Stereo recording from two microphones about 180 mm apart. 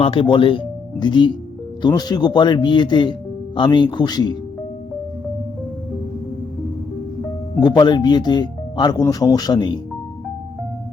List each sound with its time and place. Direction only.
0.0 s speech: 30° left (ahead or behind)
7.6 s speech: 25° left (ahead or behind)